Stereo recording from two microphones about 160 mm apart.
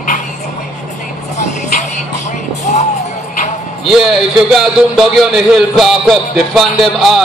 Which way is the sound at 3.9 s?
Centre (ahead or behind).